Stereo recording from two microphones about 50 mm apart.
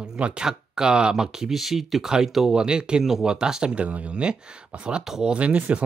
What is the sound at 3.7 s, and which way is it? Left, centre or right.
Speech, right.